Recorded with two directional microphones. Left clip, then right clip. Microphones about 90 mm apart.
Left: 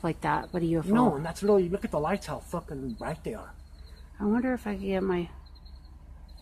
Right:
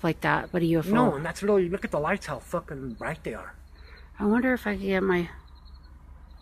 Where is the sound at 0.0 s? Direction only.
30° right (ahead or behind).